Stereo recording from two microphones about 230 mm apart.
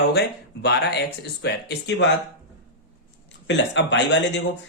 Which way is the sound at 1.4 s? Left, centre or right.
Left.